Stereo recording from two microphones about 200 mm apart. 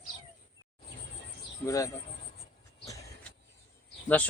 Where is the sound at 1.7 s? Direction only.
15° left (ahead or behind).